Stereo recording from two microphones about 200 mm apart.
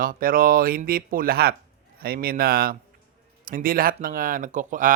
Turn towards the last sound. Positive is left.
turn(degrees=-40)  # may be behind; listen again after turning